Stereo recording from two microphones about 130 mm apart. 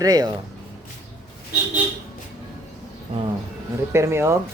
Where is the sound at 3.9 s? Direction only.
20° right (ahead or behind).